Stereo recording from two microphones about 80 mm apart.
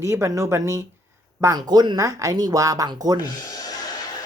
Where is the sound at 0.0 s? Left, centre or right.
Right.